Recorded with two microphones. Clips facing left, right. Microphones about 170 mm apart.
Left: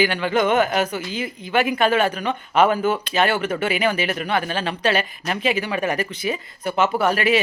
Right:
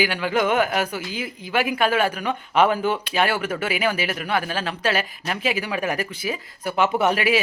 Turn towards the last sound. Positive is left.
turn(degrees=-20)  # may be behind; listen again after turning